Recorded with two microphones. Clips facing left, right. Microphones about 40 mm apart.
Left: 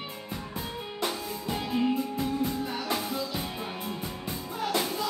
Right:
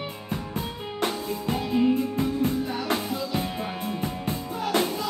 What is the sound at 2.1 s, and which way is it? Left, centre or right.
Music, right.